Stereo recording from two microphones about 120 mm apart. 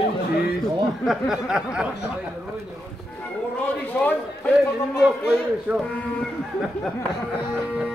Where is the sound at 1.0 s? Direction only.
5° right (ahead or behind).